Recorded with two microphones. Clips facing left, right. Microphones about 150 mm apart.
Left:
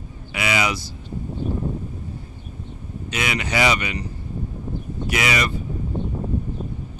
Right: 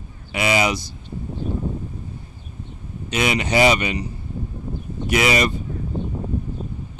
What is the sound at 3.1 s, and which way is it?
Speech, 25° right (ahead or behind).